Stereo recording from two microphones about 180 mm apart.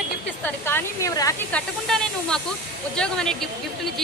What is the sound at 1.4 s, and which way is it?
Speech, 5° left (ahead or behind).